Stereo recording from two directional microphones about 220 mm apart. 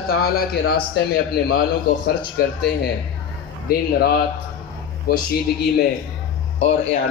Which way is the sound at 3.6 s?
45° left (ahead or behind).